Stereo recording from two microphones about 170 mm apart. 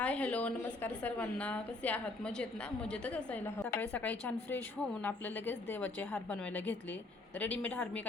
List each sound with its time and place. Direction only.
0.0 s a woman's voice: 10° left (ahead or behind)